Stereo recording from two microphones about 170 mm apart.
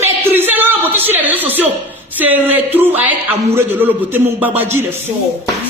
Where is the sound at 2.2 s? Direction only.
10° right (ahead or behind).